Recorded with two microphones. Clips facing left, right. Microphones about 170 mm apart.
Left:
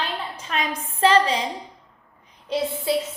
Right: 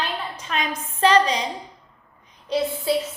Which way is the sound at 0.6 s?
30° left (ahead or behind).